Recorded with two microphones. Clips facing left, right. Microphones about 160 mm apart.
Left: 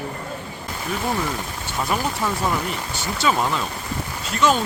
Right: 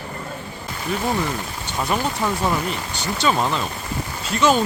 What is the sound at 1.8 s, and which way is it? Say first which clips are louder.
Speech: right 1 dB; centre (ahead or behind).